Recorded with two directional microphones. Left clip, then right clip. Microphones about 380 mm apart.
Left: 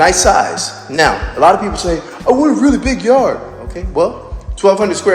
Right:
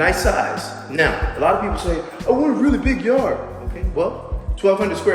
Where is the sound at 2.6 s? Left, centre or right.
Centre.